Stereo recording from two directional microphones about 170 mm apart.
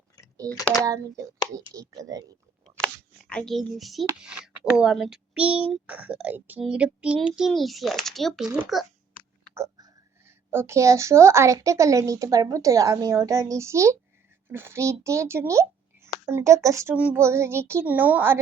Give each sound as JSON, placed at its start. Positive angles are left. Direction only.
{"t": 0.4, "sound": "speech", "side_deg": 5}
{"t": 0.9, "sound": "speech", "side_deg": -20}
{"t": 2.8, "sound": "a sound", "side_deg": 5}
{"t": 4.2, "sound": "a woman's voice", "side_deg": -5}
{"t": 9.6, "sound": "a woman's voice", "side_deg": -20}